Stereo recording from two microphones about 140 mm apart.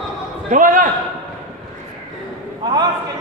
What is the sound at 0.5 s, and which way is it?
Speech, 70° right (ahead or behind).